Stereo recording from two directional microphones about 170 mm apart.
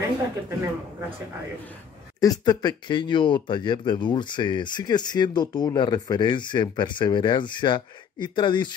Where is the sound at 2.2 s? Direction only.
25° left (ahead or behind).